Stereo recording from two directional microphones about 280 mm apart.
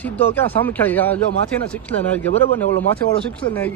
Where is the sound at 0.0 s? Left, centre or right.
Centre.